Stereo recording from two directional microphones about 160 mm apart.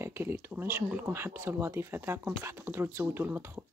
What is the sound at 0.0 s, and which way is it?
Speech, 15° right (ahead or behind).